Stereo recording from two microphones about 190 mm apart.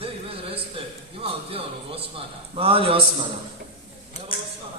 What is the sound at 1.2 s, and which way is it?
A man's voice, 30° right (ahead or behind).